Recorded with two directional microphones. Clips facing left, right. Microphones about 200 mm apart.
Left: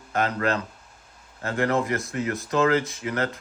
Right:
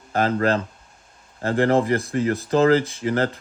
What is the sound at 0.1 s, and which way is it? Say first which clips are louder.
Speech: right 4 dB; 35° right (ahead or behind).